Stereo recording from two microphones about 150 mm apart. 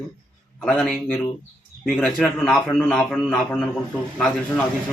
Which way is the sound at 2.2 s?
5° left (ahead or behind).